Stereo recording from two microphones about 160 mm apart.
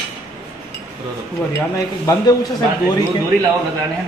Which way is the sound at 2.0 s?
25° left (ahead or behind).